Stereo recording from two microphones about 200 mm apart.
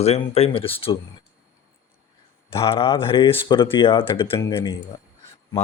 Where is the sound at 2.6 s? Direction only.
25° left (ahead or behind).